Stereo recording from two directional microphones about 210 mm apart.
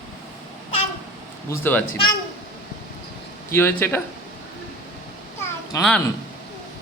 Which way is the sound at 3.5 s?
10° left (ahead or behind).